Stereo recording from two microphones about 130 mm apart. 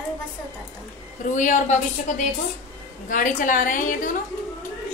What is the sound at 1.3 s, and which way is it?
Speech, 75° left (ahead or behind).